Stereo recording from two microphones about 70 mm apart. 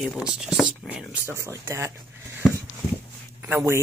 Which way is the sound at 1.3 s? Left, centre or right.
Right.